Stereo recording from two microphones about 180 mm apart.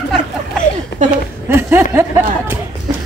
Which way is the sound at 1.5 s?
10° right (ahead or behind).